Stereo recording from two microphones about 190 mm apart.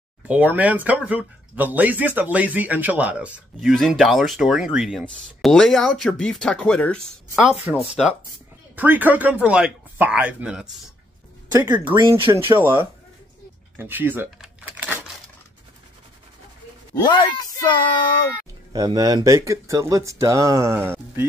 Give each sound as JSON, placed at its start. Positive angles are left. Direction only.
{"t": 0.3, "sound": "speech", "side_deg": -10}
{"t": 11.5, "sound": "speech", "side_deg": -20}
{"t": 12.4, "sound": "speech", "side_deg": -10}
{"t": 13.7, "sound": "a sound", "side_deg": -10}
{"t": 16.9, "sound": "speech", "side_deg": 25}
{"t": 18.7, "sound": "speech", "side_deg": -20}